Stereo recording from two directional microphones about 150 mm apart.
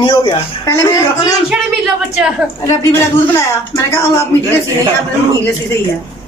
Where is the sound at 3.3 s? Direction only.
20° left (ahead or behind).